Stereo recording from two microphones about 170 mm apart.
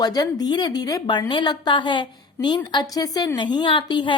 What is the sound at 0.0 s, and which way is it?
A woman's voice, 20° left (ahead or behind).